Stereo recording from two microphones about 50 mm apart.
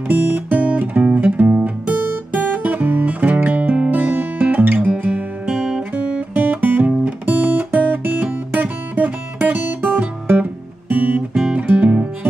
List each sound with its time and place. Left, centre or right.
0.1 s guitar: right
3.3 s music: right
5.6 s guitar: centre
6.0 s guitar: right
11.3 s music: centre
11.6 s music: right